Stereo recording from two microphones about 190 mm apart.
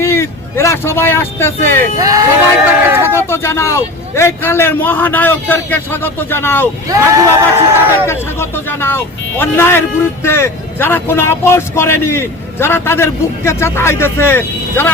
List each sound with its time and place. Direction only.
0.0 s speech: 15° left (ahead or behind)
2.0 s speech: 20° right (ahead or behind)
3.0 s speech: 15° left (ahead or behind)
6.8 s speech: 15° right (ahead or behind)
8.0 s speech: 15° left (ahead or behind)